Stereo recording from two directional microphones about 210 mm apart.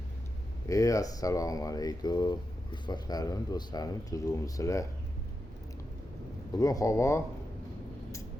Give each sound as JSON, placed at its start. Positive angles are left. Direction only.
{"t": 0.7, "sound": "speech", "side_deg": 15}
{"t": 6.5, "sound": "speech", "side_deg": 15}